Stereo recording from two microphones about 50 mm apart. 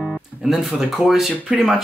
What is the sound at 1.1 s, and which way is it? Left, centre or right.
Speech, centre.